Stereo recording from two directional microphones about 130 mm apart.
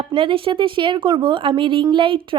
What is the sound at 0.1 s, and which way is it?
A woman's voice, 45° right (ahead or behind).